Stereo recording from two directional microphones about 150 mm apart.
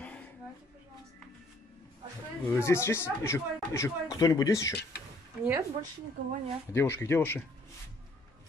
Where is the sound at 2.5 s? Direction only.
15° left (ahead or behind).